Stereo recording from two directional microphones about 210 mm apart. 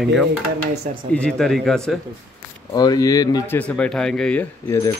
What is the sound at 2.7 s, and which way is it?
Speech, 20° left (ahead or behind).